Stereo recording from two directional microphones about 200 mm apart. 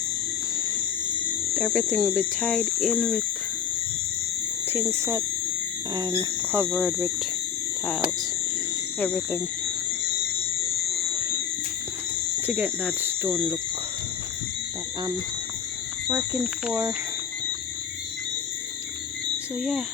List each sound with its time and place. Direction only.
1.5 s speech: centre (ahead or behind)
4.7 s speech: 10° right (ahead or behind)
6.7 s speech: centre (ahead or behind)
9.0 s speech: 10° left (ahead or behind)
12.5 s speech: 10° right (ahead or behind)